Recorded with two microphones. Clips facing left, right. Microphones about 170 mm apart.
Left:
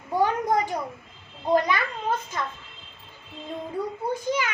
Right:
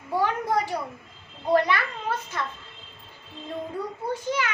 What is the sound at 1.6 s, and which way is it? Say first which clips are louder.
Speech: left 1 dB; 15° left (ahead or behind).